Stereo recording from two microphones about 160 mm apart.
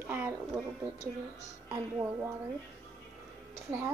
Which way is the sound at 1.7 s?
15° right (ahead or behind).